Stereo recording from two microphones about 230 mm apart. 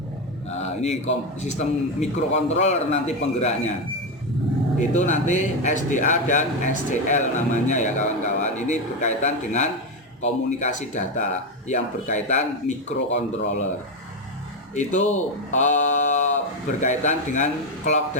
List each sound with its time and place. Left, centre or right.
1.4 s a man's voice: left
4.8 s speech: left
14.8 s speech: left